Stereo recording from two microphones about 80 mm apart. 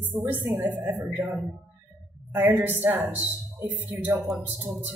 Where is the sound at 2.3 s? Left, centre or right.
Right.